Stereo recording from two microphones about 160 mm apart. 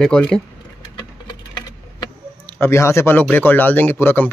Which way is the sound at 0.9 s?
30° left (ahead or behind).